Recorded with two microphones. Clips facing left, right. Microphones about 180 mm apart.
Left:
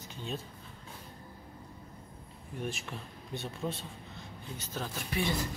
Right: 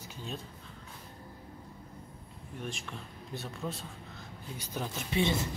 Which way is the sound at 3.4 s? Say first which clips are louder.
Left 2 dB; centre (ahead or behind).